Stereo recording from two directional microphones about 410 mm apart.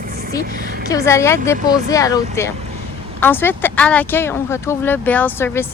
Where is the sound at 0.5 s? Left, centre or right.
Right.